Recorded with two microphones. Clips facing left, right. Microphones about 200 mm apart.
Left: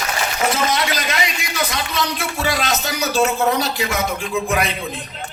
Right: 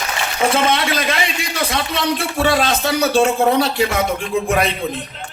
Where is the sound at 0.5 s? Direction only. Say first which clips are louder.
Right 3 dB; 30° right (ahead or behind).